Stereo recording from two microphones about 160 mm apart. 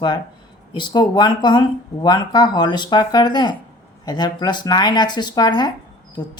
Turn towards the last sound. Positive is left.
turn(degrees=25)  # may be behind; listen again after turning